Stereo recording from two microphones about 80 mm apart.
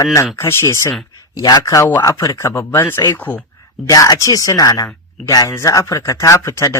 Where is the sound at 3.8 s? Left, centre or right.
Left.